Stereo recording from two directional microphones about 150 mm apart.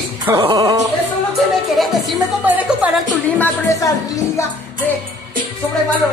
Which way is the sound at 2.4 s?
10° right (ahead or behind).